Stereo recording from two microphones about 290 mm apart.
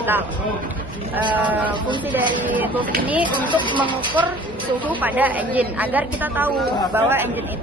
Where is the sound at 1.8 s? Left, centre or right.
Centre.